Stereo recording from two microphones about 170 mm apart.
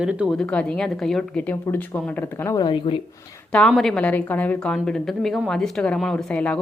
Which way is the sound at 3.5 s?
5° left (ahead or behind).